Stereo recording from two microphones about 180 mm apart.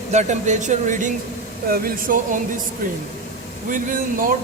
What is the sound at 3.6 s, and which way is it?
Speech, 50° right (ahead or behind).